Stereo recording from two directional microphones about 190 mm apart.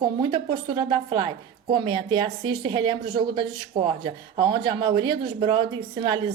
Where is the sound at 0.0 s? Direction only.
25° right (ahead or behind).